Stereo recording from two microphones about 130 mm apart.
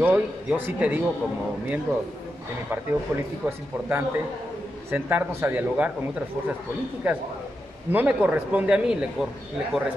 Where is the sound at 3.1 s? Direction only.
20° right (ahead or behind).